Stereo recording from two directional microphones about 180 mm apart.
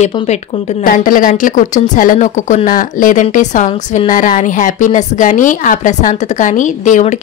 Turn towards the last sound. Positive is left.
turn(degrees=40)  # may be behind; listen again after turning